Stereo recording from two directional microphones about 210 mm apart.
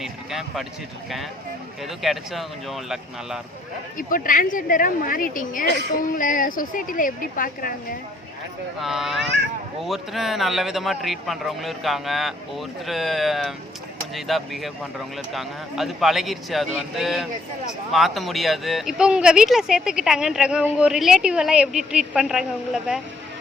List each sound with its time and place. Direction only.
0.0 s a sound: centre (ahead or behind)
2.0 s speech: centre (ahead or behind)
3.9 s a woman's voice: 40° left (ahead or behind)
8.8 s speech: centre (ahead or behind)